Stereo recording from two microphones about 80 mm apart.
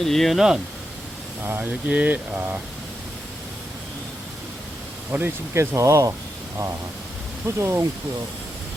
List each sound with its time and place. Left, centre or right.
0.0 s speech: centre
1.5 s speech: right
5.1 s speech: right
7.4 s speech: right